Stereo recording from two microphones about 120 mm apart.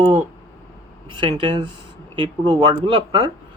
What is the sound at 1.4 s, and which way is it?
Speech, 40° right (ahead or behind).